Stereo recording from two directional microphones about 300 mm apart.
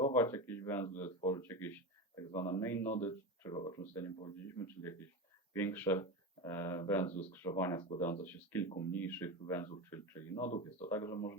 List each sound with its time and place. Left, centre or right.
0.0 s speech: centre
7.1 s speech: left
7.3 s speech: centre